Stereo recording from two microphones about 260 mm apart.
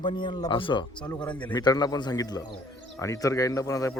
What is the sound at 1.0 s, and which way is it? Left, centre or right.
Speech, centre.